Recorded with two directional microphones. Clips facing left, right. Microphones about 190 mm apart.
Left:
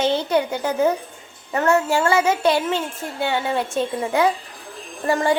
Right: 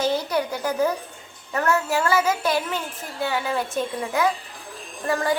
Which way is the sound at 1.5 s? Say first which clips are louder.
Left 4 dB; 25° left (ahead or behind).